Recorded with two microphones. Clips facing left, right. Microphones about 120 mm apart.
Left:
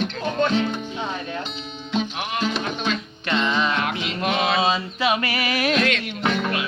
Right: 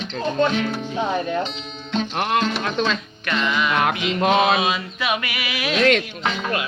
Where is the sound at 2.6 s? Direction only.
90° right.